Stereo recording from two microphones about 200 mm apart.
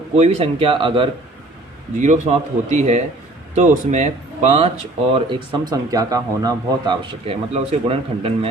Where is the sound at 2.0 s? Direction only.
35° right (ahead or behind).